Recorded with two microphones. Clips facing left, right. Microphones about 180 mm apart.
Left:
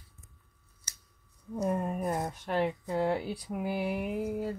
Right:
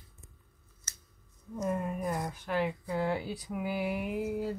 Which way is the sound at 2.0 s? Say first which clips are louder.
Left 2 dB; 25° left (ahead or behind).